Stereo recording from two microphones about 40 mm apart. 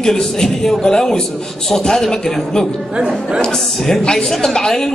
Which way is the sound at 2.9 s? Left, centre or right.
Right.